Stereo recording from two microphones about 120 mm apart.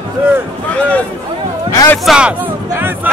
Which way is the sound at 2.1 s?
10° right (ahead or behind).